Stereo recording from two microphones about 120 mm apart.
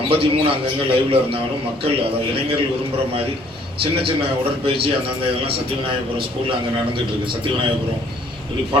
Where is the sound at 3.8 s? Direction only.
50° right (ahead or behind).